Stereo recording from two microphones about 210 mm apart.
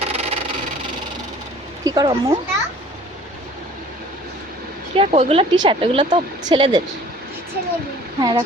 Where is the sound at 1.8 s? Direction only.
20° right (ahead or behind).